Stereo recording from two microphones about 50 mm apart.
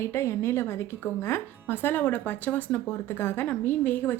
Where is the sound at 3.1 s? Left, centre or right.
Left.